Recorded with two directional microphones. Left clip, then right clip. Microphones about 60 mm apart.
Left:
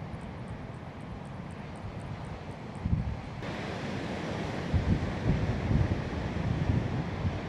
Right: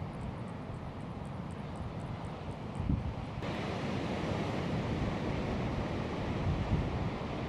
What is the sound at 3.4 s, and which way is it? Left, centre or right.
Waves, left.